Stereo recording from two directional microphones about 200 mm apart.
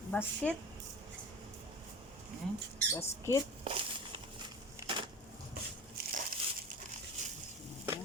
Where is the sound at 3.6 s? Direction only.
25° right (ahead or behind).